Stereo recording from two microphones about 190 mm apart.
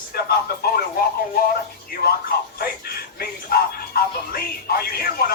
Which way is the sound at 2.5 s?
55° left (ahead or behind).